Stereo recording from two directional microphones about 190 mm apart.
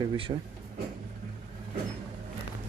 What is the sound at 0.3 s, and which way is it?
Speech, 40° right (ahead or behind).